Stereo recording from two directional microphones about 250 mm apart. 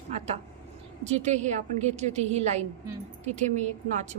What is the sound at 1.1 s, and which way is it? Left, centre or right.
A woman's voice, right.